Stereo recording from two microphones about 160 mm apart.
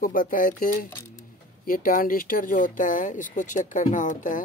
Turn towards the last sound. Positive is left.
turn(degrees=55)  # may be behind; listen again after turning